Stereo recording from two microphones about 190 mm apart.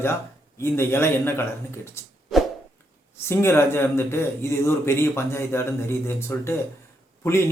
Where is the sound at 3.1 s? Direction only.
15° left (ahead or behind).